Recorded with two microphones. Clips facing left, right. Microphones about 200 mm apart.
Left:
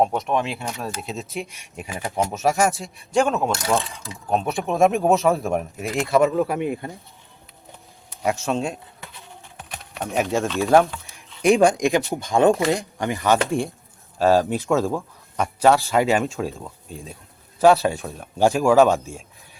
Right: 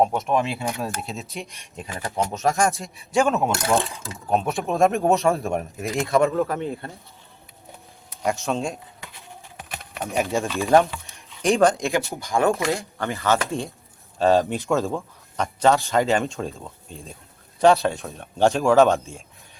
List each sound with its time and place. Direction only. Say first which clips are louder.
0.0 s speech: even; centre (ahead or behind)
8.2 s speech: left 1 dB; centre (ahead or behind)
11.4 s speech: left 3 dB; 10° left (ahead or behind)
14.2 s speech: left 1 dB; 5° left (ahead or behind)